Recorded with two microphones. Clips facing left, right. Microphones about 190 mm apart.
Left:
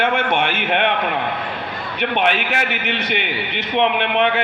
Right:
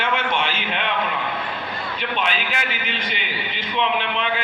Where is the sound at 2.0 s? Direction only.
60° left (ahead or behind).